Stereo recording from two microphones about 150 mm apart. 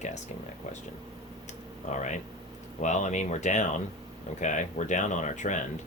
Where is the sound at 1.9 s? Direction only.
55° left (ahead or behind).